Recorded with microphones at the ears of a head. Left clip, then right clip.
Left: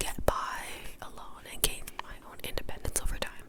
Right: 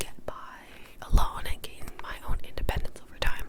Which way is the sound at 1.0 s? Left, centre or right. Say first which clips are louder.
Right 14 dB; right.